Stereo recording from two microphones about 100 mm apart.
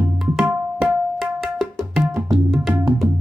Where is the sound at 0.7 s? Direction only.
Centre (ahead or behind).